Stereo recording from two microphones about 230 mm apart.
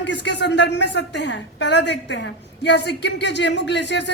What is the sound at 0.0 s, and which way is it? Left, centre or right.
A woman's voice, left.